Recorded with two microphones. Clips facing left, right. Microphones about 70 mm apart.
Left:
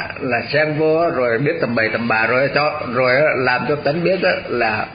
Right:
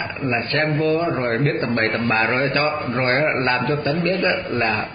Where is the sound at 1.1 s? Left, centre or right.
Left.